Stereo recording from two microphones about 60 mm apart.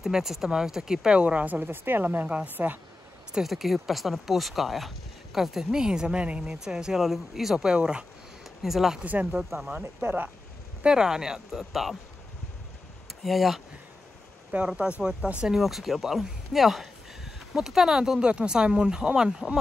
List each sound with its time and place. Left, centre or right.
0.0 s speech: centre; by 2.2 s right
2.2 s speech: right
2.5 s speech: right
3.4 s speech: centre
9.0 s speech: right
10.8 s speech: centre
13.2 s speech: centre
14.5 s speech: centre
15.4 s speech: centre